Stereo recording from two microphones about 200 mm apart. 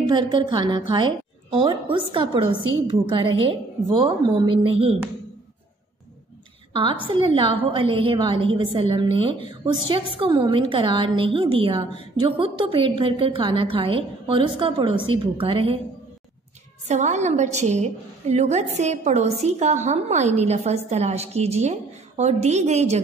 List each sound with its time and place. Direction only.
0.0 s a woman's voice: 20° right (ahead or behind)
6.7 s a woman's voice: 25° right (ahead or behind)
16.8 s a woman's voice: 35° right (ahead or behind)